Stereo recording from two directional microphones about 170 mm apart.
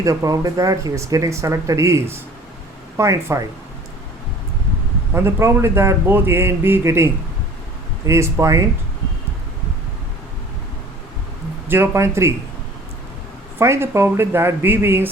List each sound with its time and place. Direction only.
0.0 s speech: 20° right (ahead or behind)
5.1 s speech: 15° right (ahead or behind)
11.7 s speech: 15° right (ahead or behind)
13.6 s speech: 15° right (ahead or behind)